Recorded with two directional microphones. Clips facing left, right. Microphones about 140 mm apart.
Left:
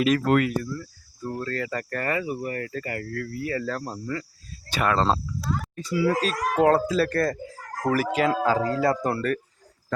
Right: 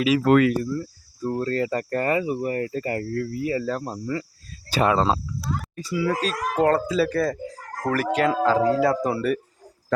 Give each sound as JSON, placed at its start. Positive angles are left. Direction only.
{"t": 0.3, "sound": "speech", "side_deg": -70}
{"t": 0.6, "sound": "speech", "side_deg": -25}